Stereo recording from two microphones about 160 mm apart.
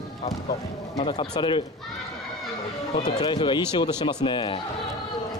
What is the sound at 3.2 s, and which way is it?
Speech, 30° left (ahead or behind).